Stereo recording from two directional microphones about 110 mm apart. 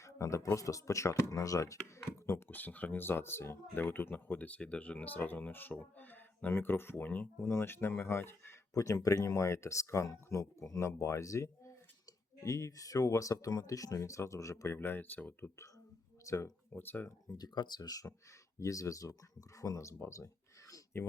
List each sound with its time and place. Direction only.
0.0 s a sound: 30° left (ahead or behind)
0.5 s speech: 30° left (ahead or behind)
17.3 s speech: 40° left (ahead or behind)